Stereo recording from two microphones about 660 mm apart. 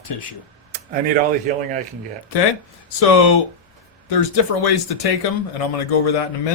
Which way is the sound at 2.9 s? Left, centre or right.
Left.